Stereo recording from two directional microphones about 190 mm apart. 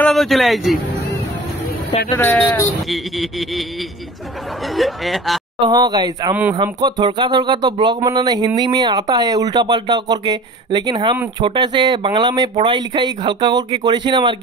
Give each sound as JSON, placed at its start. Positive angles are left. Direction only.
{"t": 0.0, "sound": "a man's voice", "side_deg": 0}
{"t": 2.1, "sound": "speech", "side_deg": 10}
{"t": 2.9, "sound": "music", "side_deg": 0}
{"t": 4.7, "sound": "music", "side_deg": 0}
{"t": 5.6, "sound": "speech", "side_deg": -20}